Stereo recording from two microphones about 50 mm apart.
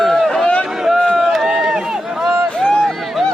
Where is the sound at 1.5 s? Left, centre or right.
Centre.